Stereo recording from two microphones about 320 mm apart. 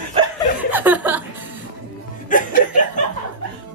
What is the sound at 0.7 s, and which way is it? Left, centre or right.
Chuckle, centre.